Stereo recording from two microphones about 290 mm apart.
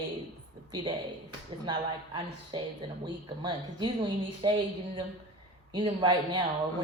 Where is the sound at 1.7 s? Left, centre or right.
Centre.